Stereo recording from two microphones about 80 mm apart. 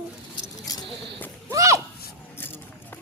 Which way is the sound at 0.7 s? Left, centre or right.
Left.